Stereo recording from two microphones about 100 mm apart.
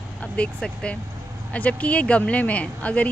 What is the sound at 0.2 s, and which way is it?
Speech, 10° left (ahead or behind).